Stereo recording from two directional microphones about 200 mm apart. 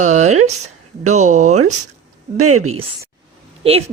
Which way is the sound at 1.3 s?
35° right (ahead or behind).